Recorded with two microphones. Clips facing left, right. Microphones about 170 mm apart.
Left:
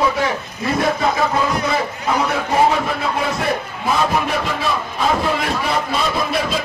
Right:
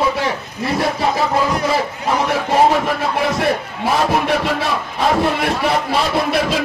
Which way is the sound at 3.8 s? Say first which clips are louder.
Right 2 dB; 70° right (ahead or behind).